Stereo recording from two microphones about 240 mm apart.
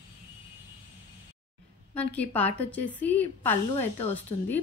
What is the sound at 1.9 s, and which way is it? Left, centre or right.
Speech, centre.